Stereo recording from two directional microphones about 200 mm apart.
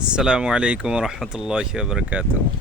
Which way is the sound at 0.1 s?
5° right (ahead or behind).